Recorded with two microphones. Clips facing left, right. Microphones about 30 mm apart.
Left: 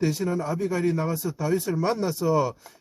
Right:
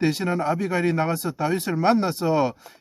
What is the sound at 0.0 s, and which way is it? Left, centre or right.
Speech, right.